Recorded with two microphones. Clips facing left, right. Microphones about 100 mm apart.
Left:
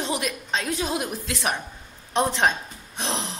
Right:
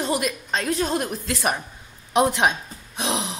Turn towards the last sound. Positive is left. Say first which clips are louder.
# right 3 dB
turn(degrees=-5)  # may be behind; listen again after turning